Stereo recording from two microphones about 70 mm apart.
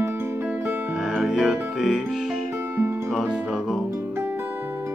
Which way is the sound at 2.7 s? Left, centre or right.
Right.